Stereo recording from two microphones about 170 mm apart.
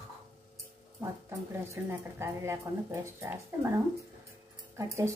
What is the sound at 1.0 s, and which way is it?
A woman's voice, 15° right (ahead or behind).